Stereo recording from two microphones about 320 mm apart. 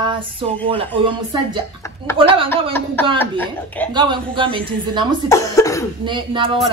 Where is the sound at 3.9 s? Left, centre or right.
Centre.